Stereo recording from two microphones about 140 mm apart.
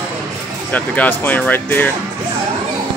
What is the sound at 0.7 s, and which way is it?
Speech, 10° left (ahead or behind).